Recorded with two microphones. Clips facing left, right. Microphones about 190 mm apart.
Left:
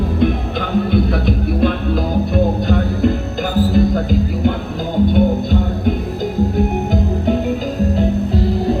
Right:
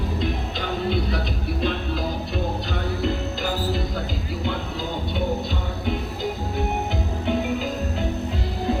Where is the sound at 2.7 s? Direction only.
50° left (ahead or behind).